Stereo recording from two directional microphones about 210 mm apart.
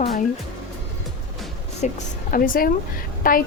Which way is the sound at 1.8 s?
40° left (ahead or behind).